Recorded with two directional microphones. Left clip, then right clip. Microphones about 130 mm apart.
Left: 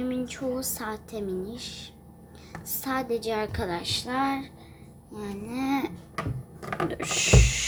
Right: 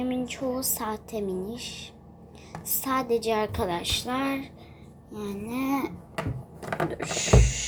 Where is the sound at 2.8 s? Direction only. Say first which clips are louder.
Right 3 dB; 65° left (ahead or behind).